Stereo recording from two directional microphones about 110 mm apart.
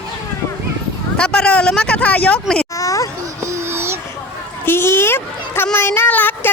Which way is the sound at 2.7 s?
30° left (ahead or behind).